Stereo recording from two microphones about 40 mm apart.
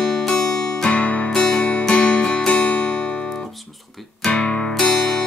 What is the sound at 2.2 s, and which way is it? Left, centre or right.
Music, left.